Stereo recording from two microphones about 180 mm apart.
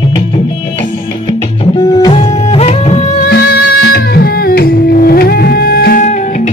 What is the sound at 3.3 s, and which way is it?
Music, 65° left (ahead or behind).